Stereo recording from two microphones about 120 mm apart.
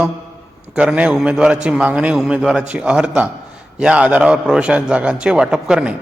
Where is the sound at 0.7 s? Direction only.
10° right (ahead or behind).